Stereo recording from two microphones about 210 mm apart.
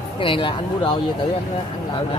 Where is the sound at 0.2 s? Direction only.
25° left (ahead or behind).